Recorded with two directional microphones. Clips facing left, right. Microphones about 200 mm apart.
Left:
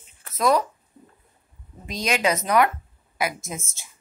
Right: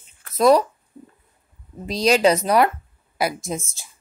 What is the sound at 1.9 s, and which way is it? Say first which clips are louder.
Speech: right 7 dB; 35° right (ahead or behind).